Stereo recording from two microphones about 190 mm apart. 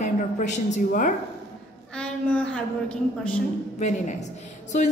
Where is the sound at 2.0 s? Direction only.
5° left (ahead or behind).